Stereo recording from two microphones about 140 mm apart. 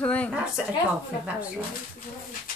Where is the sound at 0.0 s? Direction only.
10° left (ahead or behind).